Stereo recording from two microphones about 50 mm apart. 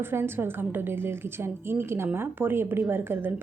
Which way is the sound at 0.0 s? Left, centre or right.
Right.